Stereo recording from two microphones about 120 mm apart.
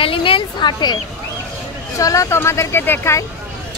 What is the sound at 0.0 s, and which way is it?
Speech, 50° left (ahead or behind).